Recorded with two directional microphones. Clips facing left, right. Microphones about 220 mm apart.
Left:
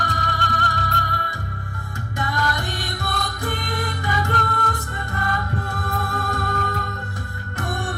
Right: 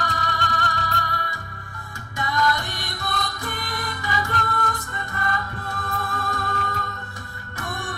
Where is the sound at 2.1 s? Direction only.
50° left (ahead or behind).